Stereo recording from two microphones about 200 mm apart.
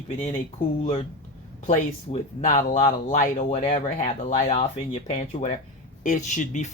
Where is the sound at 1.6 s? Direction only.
35° left (ahead or behind).